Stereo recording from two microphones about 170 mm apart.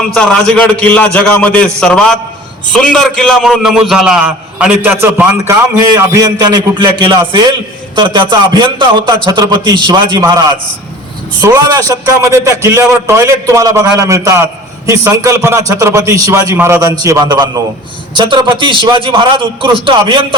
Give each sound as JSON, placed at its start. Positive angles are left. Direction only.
{"t": 0.1, "sound": "a man's voice", "side_deg": 5}